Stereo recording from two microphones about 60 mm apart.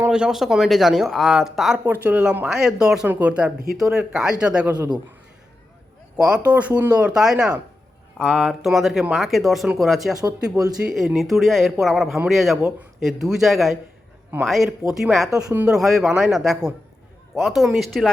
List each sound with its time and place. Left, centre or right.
0.1 s speech: centre
2.0 s speech: right
2.5 s speech: centre
3.8 s speech: centre
6.1 s speech: centre
6.4 s speech: right
8.2 s speech: centre